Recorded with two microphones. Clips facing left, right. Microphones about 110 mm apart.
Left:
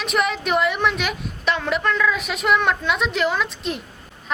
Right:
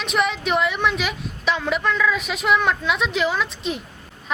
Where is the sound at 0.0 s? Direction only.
Centre (ahead or behind).